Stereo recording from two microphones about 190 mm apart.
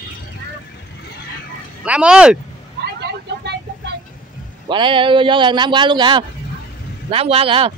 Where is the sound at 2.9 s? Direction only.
60° right (ahead or behind).